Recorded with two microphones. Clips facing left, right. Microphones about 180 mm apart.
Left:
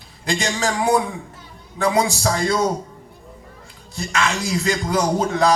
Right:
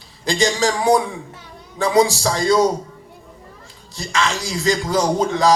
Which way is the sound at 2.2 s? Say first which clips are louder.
Right 3 dB; 35° right (ahead or behind).